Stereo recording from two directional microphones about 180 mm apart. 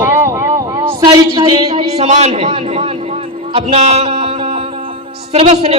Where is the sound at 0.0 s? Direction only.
10° right (ahead or behind).